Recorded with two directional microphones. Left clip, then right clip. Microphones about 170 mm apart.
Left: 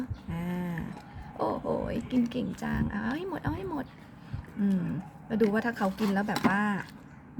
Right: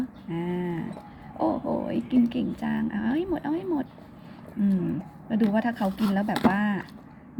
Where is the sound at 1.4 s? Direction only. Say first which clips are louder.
Right 3 dB; 50° left (ahead or behind).